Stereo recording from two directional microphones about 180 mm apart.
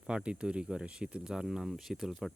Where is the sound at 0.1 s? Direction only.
5° right (ahead or behind).